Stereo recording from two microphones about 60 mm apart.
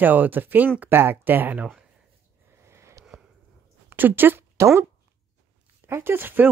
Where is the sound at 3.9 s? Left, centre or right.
Right.